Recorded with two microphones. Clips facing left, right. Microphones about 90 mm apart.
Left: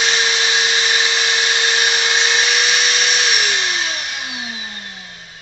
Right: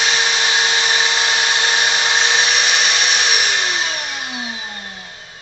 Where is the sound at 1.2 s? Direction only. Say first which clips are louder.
Right 1 dB; 30° right (ahead or behind).